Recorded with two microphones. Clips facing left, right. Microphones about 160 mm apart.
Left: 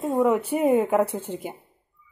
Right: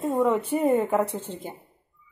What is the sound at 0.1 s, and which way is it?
A woman's voice, centre (ahead or behind).